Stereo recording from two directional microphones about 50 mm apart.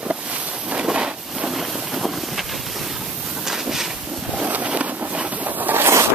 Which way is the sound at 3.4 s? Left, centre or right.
Centre.